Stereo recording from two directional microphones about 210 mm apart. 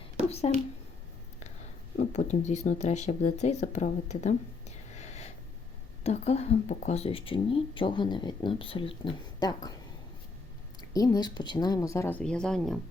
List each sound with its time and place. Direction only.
0.5 s speech: 30° left (ahead or behind)
2.0 s speech: 35° left (ahead or behind)
4.9 s a sound: 30° left (ahead or behind)
6.0 s speech: 30° left (ahead or behind)
10.9 s a woman's voice: 15° left (ahead or behind)